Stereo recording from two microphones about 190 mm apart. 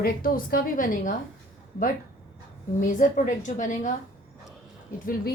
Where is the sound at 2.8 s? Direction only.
40° left (ahead or behind).